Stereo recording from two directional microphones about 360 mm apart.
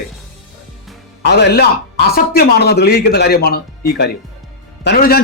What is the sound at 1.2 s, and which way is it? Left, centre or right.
Speech, left.